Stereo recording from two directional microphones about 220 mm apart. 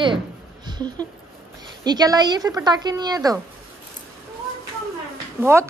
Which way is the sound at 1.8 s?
20° right (ahead or behind).